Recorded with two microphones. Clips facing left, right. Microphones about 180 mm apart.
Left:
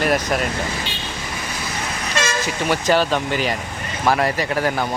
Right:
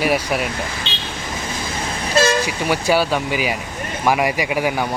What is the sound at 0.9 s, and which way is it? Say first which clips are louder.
Vehicle: even; 25° right (ahead or behind).